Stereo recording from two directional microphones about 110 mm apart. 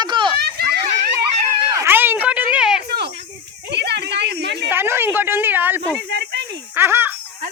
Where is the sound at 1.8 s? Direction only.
20° right (ahead or behind).